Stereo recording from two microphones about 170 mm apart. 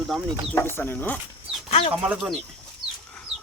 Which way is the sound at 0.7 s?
10° left (ahead or behind).